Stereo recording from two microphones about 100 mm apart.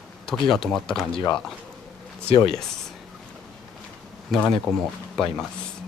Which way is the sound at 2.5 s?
5° left (ahead or behind).